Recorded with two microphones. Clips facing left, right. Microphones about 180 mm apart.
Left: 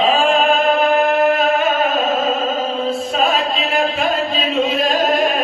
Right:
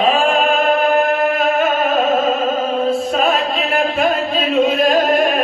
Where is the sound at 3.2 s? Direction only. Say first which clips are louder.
Right 1 dB; 50° right (ahead or behind).